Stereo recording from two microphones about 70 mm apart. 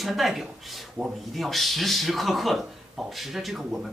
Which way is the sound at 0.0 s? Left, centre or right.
Centre.